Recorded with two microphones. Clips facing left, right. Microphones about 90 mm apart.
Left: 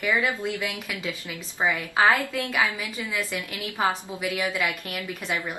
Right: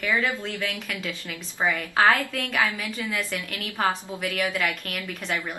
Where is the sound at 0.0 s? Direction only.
15° left (ahead or behind).